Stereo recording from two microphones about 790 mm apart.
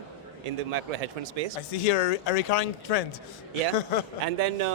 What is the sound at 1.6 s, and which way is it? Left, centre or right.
Speech, left.